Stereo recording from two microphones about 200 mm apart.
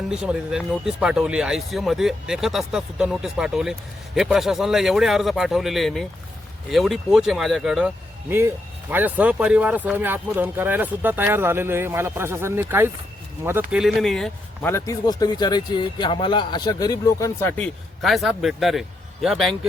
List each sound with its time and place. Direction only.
0.1 s speech: 5° right (ahead or behind)
14.7 s a man's voice: 15° left (ahead or behind)
18.0 s speech: centre (ahead or behind)